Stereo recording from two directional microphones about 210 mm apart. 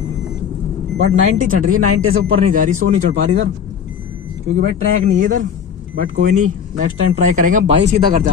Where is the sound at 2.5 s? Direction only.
40° right (ahead or behind).